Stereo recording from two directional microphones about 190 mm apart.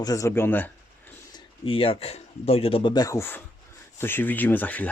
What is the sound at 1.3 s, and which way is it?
Speech, 30° left (ahead or behind).